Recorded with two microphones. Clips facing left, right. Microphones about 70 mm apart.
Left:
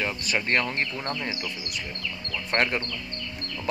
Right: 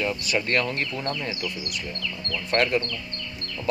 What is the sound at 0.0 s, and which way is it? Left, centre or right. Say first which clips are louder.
Speech: right 2 dB; left.